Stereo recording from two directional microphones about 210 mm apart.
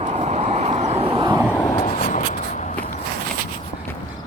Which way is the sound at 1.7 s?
35° left (ahead or behind).